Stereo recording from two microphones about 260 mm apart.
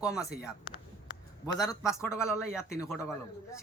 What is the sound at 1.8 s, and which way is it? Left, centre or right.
Speech, centre.